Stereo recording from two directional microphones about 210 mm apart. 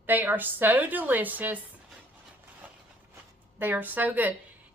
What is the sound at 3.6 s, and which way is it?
Speech, 10° right (ahead or behind).